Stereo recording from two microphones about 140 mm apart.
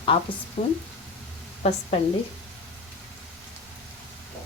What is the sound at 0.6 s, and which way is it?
Speech, 55° left (ahead or behind).